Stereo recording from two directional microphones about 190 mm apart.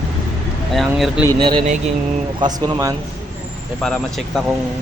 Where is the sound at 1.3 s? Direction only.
25° right (ahead or behind).